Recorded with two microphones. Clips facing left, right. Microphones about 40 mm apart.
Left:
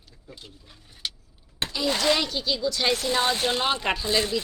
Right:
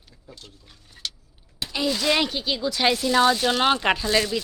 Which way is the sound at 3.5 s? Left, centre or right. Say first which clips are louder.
Right 4 dB; right.